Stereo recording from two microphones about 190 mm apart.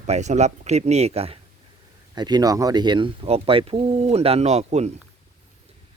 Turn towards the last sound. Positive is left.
turn(degrees=-35)  # may be behind; listen again after turning